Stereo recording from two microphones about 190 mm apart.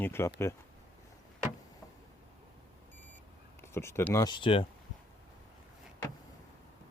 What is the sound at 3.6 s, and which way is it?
Speech, 15° left (ahead or behind).